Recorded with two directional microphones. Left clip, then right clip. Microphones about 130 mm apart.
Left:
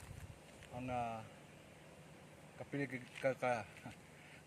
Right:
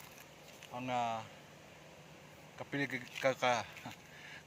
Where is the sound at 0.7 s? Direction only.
15° left (ahead or behind).